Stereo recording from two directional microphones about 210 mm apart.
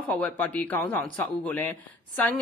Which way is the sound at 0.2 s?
10° left (ahead or behind).